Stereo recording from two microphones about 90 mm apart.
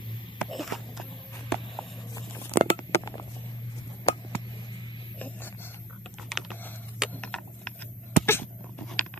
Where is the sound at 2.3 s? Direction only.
30° left (ahead or behind).